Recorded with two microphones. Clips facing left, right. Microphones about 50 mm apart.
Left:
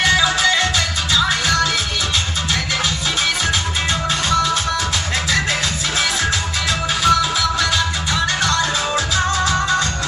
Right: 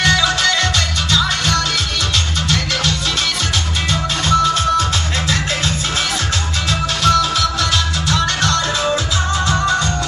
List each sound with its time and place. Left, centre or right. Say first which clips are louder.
0.0 s music: even; right
7.0 s music: right 1 dB; right